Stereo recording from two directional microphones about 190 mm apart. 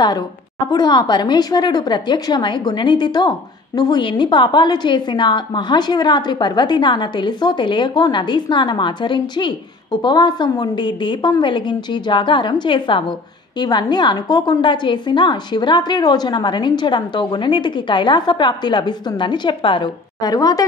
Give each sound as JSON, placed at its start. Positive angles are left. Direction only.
{"t": 0.7, "sound": "a woman's voice", "side_deg": 20}